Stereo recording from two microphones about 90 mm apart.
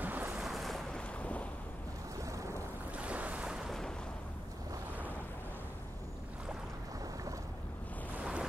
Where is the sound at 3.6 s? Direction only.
5° left (ahead or behind).